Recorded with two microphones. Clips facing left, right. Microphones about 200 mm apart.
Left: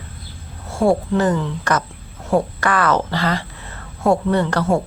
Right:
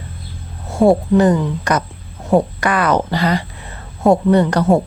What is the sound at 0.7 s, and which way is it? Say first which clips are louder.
Speech: right 5 dB; 20° right (ahead or behind).